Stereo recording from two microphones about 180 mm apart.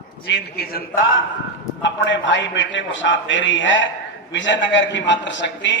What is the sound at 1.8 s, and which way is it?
A man's voice, 85° left.